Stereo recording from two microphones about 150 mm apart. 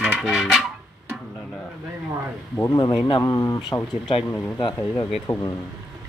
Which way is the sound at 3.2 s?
20° left (ahead or behind).